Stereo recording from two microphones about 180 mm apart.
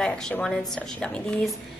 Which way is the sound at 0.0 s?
5° left (ahead or behind).